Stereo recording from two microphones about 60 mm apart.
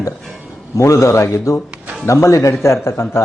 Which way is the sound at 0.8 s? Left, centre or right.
Left.